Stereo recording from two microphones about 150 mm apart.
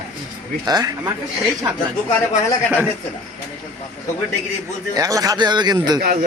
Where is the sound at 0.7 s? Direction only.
25° right (ahead or behind).